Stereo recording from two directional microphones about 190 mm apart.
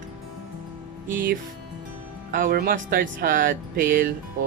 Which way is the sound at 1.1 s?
50° right (ahead or behind).